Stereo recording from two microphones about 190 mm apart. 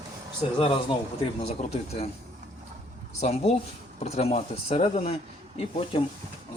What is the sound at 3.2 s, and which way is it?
Speech, 35° left (ahead or behind).